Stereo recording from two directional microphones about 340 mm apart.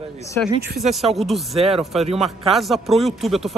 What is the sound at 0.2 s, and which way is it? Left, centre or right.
Speech, centre.